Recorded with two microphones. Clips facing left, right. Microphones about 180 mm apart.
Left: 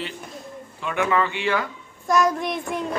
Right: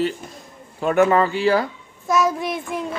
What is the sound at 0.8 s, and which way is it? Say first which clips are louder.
Speech: right 7 dB; 40° right (ahead or behind).